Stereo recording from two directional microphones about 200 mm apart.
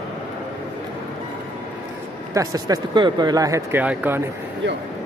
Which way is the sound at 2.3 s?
20° right (ahead or behind).